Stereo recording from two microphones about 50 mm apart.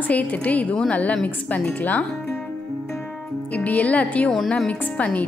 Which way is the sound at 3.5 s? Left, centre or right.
Left.